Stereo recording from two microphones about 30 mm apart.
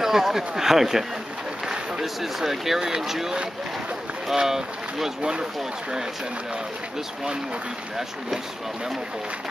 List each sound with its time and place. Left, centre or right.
0.0 s speech: centre
2.4 s speech: centre
4.4 s speech: centre
5.2 s speech: right